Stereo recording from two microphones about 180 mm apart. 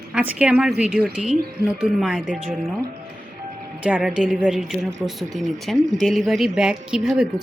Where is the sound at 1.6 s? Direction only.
60° right (ahead or behind).